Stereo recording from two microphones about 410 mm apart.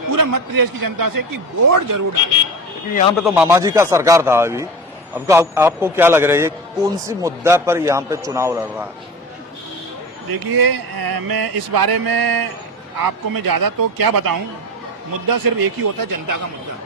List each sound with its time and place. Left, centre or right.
0.1 s a man's voice: right
3.2 s a man's voice: centre
10.3 s a man's voice: right